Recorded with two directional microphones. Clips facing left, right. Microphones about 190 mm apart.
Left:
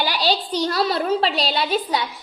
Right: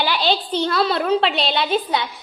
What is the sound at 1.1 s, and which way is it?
Speech, 5° left (ahead or behind).